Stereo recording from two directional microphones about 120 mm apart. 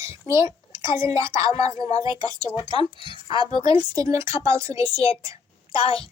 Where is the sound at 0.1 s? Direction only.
25° right (ahead or behind).